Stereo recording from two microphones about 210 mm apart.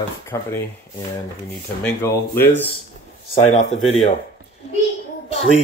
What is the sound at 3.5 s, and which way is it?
Speech, 30° left (ahead or behind).